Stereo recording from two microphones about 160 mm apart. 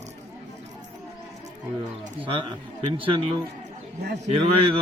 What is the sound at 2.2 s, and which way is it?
Speech, 30° right (ahead or behind).